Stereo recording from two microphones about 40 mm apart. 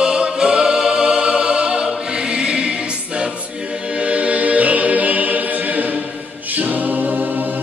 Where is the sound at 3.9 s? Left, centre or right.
Right.